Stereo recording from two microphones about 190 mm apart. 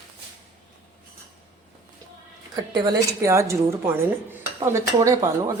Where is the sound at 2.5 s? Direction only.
20° right (ahead or behind).